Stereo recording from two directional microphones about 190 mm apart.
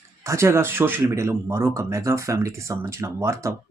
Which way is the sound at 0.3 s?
15° right (ahead or behind).